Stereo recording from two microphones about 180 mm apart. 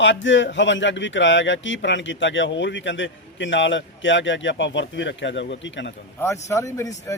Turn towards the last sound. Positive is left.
turn(degrees=15)  # may be behind; listen again after turning